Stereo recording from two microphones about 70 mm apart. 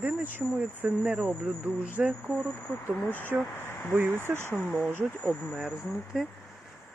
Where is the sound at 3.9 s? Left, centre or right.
Right.